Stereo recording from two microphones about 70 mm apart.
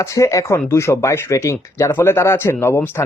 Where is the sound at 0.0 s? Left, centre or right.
Left.